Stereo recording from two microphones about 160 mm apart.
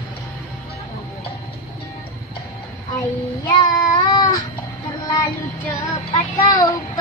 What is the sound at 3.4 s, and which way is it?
Child singing, 25° left (ahead or behind).